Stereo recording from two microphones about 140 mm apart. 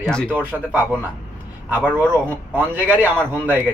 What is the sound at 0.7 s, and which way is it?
Speech, 10° right (ahead or behind).